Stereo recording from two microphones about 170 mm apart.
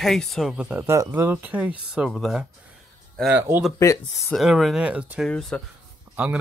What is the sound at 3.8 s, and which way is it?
Speech, 15° left (ahead or behind).